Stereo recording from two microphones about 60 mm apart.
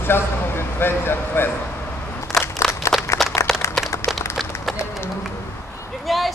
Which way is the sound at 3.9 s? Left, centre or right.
Left.